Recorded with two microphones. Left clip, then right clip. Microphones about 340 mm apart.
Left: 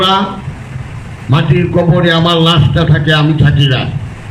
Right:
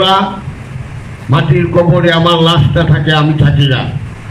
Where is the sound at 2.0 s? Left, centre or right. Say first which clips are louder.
Right 1 dB; centre.